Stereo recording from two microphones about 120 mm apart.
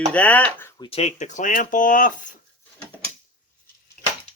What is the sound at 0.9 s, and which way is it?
Speech, 65° left (ahead or behind).